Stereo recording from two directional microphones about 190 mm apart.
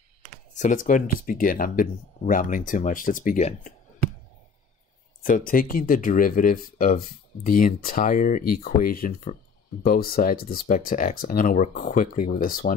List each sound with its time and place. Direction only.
0.6 s speech: 40° left (ahead or behind)
5.2 s speech: 45° left (ahead or behind)